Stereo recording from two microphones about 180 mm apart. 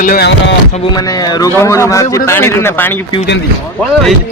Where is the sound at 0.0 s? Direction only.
50° left (ahead or behind).